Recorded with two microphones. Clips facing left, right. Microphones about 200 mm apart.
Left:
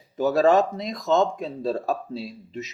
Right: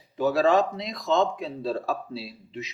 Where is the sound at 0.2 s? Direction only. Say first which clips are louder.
Left 2 dB; 45° left (ahead or behind).